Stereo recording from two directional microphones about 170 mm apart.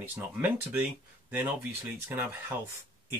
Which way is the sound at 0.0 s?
10° right (ahead or behind).